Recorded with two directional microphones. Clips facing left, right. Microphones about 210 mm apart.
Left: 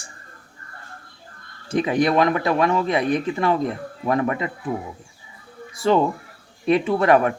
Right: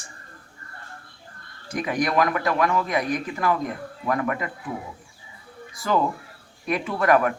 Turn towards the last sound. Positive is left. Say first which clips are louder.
# left 3 dB
turn(degrees=25)  # may be behind; listen again after turning